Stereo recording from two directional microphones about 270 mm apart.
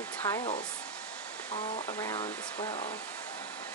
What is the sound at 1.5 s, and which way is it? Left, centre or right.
Speech, centre.